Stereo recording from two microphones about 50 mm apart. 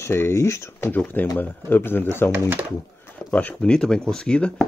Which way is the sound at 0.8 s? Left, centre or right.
Left.